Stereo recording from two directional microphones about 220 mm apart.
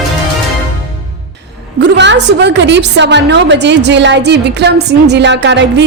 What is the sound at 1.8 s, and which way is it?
A woman's voice, 50° right (ahead or behind).